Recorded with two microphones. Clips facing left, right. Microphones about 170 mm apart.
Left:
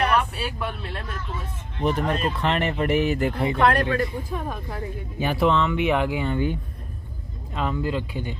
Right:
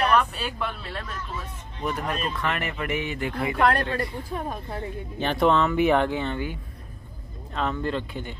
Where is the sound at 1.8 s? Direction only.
30° left (ahead or behind).